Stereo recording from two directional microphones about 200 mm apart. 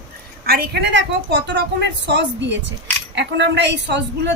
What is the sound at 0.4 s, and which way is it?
A woman's voice, 50° right (ahead or behind).